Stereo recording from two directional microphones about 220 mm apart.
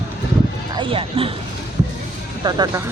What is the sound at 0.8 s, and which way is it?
Speech, 25° right (ahead or behind).